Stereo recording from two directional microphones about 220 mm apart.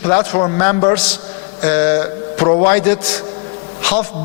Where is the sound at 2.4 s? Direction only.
30° left (ahead or behind).